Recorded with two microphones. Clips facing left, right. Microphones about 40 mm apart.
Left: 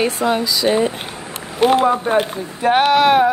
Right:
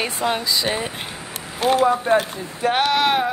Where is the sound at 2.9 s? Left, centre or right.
Centre.